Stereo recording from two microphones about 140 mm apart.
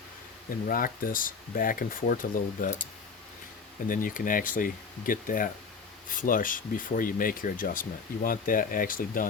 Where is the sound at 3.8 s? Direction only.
75° left (ahead or behind).